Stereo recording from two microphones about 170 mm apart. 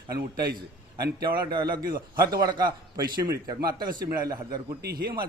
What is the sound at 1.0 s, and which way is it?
A man's voice, 25° right (ahead or behind).